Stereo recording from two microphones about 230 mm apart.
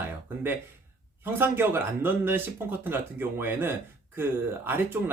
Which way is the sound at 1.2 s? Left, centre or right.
Centre.